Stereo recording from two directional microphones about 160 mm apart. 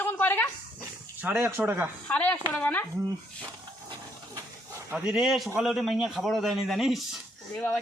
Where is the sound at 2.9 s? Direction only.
20° right (ahead or behind).